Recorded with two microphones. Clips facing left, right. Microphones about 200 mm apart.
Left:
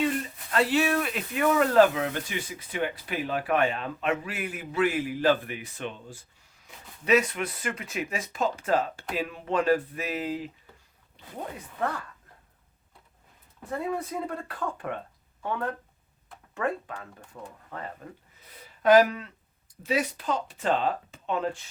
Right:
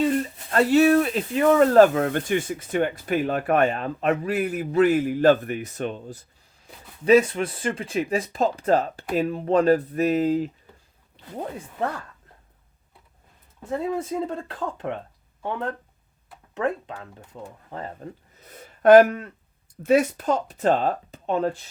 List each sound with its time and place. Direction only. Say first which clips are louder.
0.5 s speech: right 8 dB; 45° right (ahead or behind)
13.7 s speech: right 5 dB; 25° right (ahead or behind)
17.7 s speech: right 4 dB; 30° right (ahead or behind)
18.3 s a sound: right 6 dB; 45° right (ahead or behind)
19.8 s speech: right 9 dB; 50° right (ahead or behind)